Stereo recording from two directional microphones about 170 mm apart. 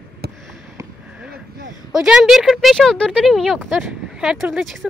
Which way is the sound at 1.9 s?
5° right (ahead or behind).